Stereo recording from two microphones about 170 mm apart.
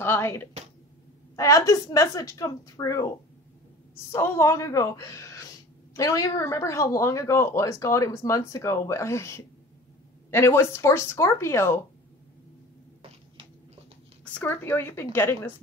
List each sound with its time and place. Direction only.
0.0 s a sound: 15° left (ahead or behind)
1.3 s a woman's voice: 20° left (ahead or behind)
4.1 s speech: 15° left (ahead or behind)
14.2 s speech: 10° left (ahead or behind)